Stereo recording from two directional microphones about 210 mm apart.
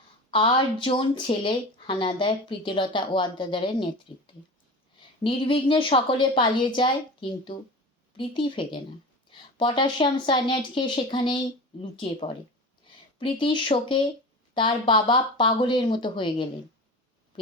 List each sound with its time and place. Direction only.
0.3 s speech: 25° left (ahead or behind)
5.2 s speech: 25° left (ahead or behind)